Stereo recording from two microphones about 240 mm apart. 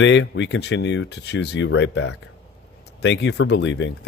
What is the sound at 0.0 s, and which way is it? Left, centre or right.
Speech, left.